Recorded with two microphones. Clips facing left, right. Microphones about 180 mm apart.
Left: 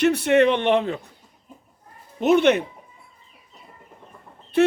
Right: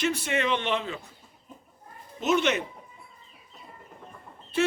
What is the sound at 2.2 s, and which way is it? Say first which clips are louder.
Speech: left 8 dB; 60° left (ahead or behind).